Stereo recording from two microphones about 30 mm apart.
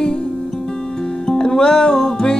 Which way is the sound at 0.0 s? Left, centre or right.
Left.